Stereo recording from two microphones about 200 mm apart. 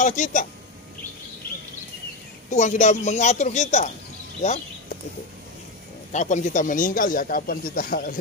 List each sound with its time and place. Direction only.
0.0 s a woman's voice: 40° left (ahead or behind)
2.5 s a woman's voice: 35° left (ahead or behind)
6.1 s a man's voice: 40° left (ahead or behind)